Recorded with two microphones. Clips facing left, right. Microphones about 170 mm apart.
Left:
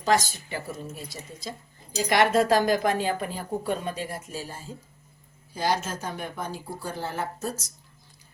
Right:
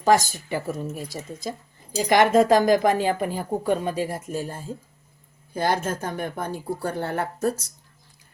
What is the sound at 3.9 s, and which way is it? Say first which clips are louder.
Speech: right 7 dB; 10° right (ahead or behind).